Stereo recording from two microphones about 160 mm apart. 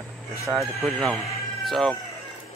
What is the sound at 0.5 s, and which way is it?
Speech, centre (ahead or behind).